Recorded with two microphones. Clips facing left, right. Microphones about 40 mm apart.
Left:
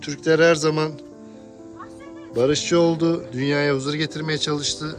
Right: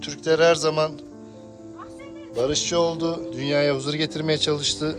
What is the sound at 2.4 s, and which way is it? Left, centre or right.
Music, centre.